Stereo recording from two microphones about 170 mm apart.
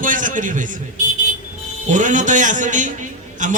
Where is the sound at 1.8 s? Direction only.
45° right (ahead or behind).